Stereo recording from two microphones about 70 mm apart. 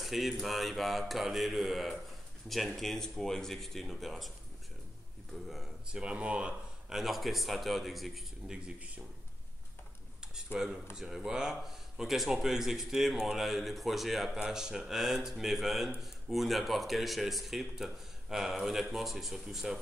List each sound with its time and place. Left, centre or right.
0.0 s speech: centre
5.3 s speech: centre
5.9 s speech: centre
7.0 s speech: centre
8.5 s speech: centre
10.3 s speech: centre